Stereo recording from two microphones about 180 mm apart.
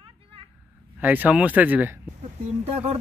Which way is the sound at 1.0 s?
10° right (ahead or behind).